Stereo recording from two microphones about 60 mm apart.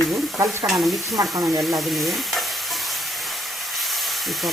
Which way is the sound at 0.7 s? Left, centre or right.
Centre.